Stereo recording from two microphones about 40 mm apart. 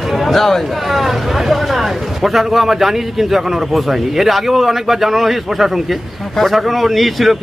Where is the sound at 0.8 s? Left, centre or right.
Centre.